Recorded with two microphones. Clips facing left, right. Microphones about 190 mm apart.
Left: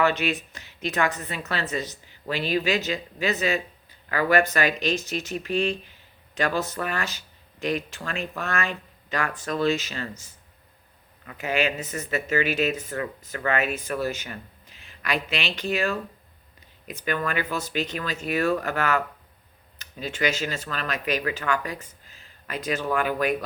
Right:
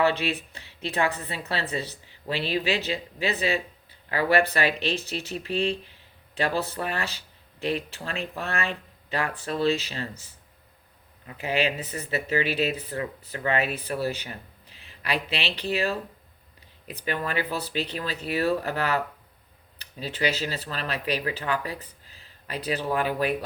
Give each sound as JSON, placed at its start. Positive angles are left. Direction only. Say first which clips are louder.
{"t": 0.0, "sound": "a woman's voice", "louder": "left 1 dB", "side_deg": -30}
{"t": 11.3, "sound": "a woman's voice", "louder": "left 1 dB", "side_deg": -35}